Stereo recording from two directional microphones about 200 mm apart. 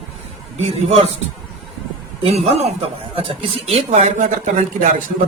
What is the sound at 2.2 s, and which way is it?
Speech, 30° right (ahead or behind).